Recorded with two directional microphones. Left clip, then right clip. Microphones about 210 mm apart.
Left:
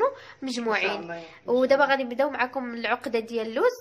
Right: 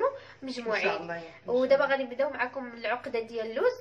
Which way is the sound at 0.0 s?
50° left (ahead or behind).